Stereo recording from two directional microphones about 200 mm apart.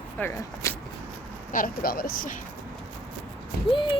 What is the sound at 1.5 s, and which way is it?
Speech, 45° left (ahead or behind).